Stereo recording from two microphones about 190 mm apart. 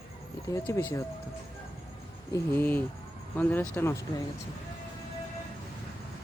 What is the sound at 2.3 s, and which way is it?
Speech, 10° left (ahead or behind).